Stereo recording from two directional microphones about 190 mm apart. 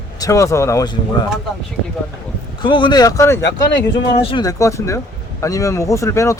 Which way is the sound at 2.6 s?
25° left (ahead or behind).